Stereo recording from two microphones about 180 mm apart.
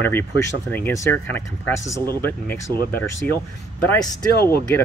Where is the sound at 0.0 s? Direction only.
10° left (ahead or behind).